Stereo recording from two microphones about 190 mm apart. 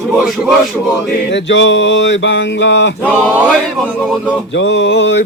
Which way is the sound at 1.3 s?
70° left (ahead or behind).